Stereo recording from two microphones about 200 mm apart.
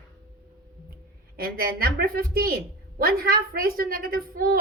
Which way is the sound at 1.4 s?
45° right (ahead or behind).